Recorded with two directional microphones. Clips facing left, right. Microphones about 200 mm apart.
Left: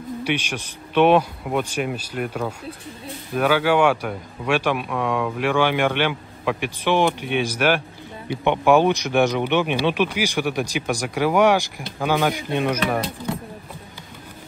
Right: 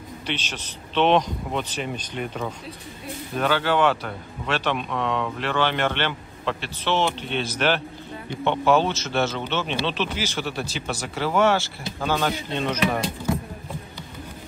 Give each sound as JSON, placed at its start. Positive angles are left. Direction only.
{"t": 0.2, "sound": "speech", "side_deg": 10}